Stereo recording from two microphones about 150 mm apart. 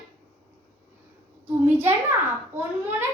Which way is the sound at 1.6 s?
15° right (ahead or behind).